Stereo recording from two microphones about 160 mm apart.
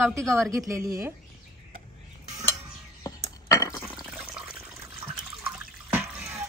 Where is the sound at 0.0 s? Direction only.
Centre (ahead or behind).